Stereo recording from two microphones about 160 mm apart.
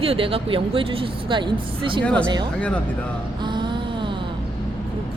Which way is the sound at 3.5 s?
30° right (ahead or behind).